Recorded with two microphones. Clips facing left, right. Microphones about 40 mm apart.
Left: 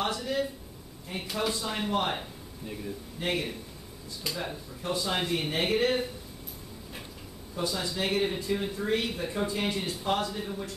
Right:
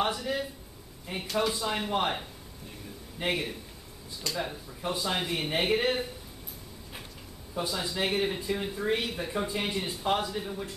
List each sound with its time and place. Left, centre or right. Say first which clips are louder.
0.0 s speech: even; centre
7.5 s speech: even; centre